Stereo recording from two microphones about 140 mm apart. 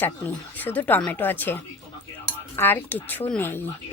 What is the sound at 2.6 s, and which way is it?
Speech, 15° left (ahead or behind).